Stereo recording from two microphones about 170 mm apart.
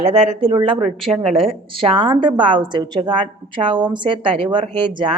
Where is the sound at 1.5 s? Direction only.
30° right (ahead or behind).